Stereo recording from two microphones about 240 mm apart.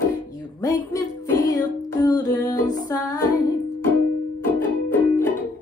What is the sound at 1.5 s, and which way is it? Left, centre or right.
Music, centre.